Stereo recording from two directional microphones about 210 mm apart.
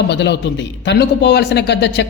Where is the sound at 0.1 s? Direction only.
55° left (ahead or behind).